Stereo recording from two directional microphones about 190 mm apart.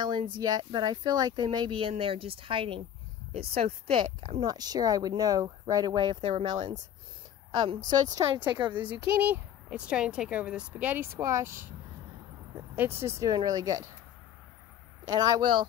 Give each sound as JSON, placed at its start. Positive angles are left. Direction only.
{"t": 0.0, "sound": "speech", "side_deg": -25}
{"t": 7.5, "sound": "speech", "side_deg": -25}
{"t": 8.6, "sound": "speech", "side_deg": -10}
{"t": 12.7, "sound": "speech", "side_deg": -10}
{"t": 15.0, "sound": "speech", "side_deg": -20}